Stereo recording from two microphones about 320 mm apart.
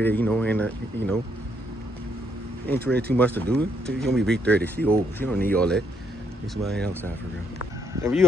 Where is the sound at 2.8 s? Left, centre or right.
Right.